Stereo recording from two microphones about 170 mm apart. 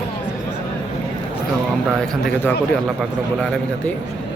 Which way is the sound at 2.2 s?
5° left (ahead or behind).